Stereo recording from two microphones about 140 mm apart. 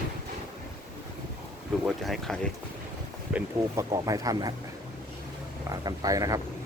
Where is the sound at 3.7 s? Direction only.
25° right (ahead or behind).